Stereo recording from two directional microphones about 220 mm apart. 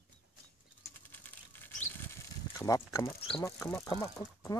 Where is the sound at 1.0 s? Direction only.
10° left (ahead or behind).